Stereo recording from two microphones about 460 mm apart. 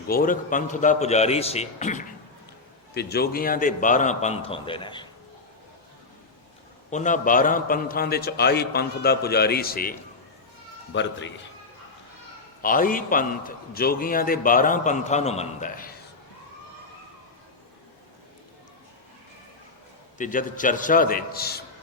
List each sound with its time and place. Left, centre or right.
0.1 s a man's voice: centre
6.9 s a man's voice: centre
10.9 s a man's voice: left
12.6 s a man's voice: centre
20.1 s a man's voice: centre